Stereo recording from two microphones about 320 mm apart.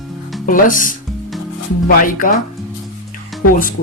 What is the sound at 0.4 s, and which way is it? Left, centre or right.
Speech, left.